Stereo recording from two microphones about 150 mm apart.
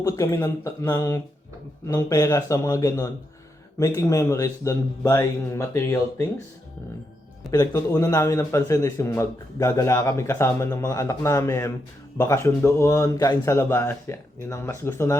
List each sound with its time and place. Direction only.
0.0 s a man's voice: 20° left (ahead or behind)
7.5 s a man's voice: 20° left (ahead or behind)